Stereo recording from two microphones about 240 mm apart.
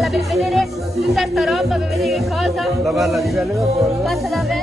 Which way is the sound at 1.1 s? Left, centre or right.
Centre.